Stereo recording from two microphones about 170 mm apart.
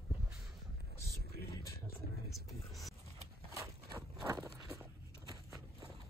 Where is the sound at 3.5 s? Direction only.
20° right (ahead or behind).